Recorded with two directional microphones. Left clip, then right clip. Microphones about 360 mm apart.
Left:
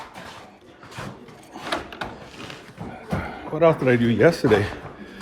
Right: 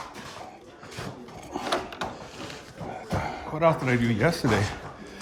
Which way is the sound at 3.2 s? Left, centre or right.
Centre.